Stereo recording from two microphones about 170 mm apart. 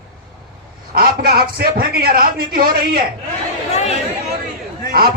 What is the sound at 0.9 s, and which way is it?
A man's voice, 60° right (ahead or behind).